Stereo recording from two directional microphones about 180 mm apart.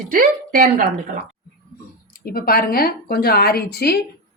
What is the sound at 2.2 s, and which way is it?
A woman's voice, 55° left (ahead or behind).